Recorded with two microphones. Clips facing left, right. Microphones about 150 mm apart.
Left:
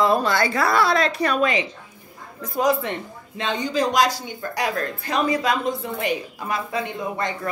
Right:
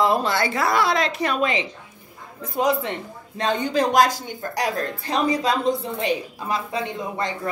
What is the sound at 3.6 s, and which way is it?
A woman's voice, 55° right (ahead or behind).